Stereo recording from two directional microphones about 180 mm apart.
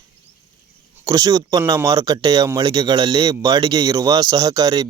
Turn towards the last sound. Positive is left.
turn(degrees=-20)  # may be behind; listen again after turning